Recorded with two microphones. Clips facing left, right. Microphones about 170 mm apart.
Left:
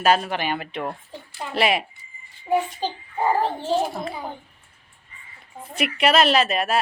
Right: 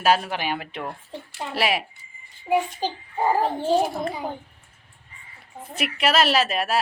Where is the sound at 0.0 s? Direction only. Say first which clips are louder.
Left 1 dB; 5° right (ahead or behind).